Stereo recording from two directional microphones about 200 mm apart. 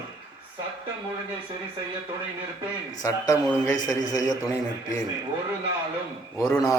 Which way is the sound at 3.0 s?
15° left (ahead or behind).